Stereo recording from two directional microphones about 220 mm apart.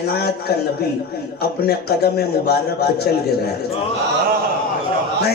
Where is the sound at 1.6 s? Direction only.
45° left (ahead or behind).